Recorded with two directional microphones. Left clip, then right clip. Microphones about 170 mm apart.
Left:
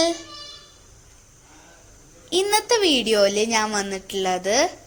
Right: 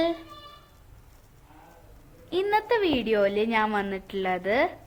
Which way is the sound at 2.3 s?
30° left (ahead or behind).